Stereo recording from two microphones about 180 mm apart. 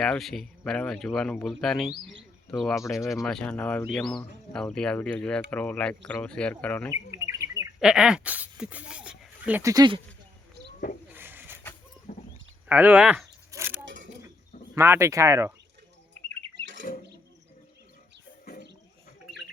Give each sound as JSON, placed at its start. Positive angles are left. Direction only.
{"t": 0.0, "sound": "speech", "side_deg": 0}
{"t": 6.9, "sound": "bird", "side_deg": -15}
{"t": 7.8, "sound": "speech", "side_deg": -5}
{"t": 11.1, "sound": "pigeon", "side_deg": -10}
{"t": 12.1, "sound": "livestock", "side_deg": 50}
{"t": 12.6, "sound": "speech", "side_deg": -10}
{"t": 13.5, "sound": "a sound", "side_deg": -15}
{"t": 13.8, "sound": "a sound", "side_deg": -90}
{"t": 14.8, "sound": "speech", "side_deg": -15}